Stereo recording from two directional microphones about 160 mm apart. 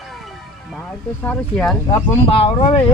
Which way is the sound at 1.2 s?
10° left (ahead or behind).